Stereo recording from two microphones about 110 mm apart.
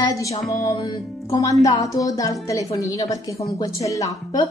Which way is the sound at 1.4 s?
30° left (ahead or behind).